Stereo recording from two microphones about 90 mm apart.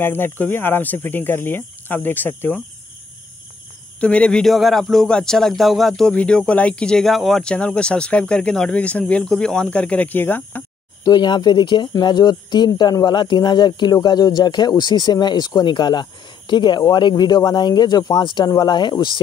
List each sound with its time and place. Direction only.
0.0 s speech: 25° left (ahead or behind)
4.0 s speech: 10° left (ahead or behind)
11.1 s speech: 55° left (ahead or behind)
18.2 s speech: 60° left (ahead or behind)